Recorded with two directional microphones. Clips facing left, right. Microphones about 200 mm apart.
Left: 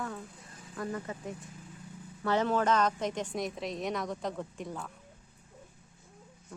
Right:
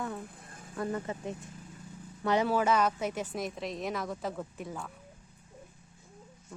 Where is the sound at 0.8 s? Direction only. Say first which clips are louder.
Right 3 dB; 25° right (ahead or behind).